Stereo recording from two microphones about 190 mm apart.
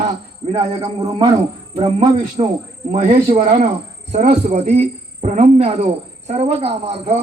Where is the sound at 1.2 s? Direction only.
20° right (ahead or behind).